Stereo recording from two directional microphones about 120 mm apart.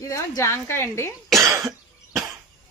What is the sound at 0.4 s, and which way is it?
Speech, 20° left (ahead or behind).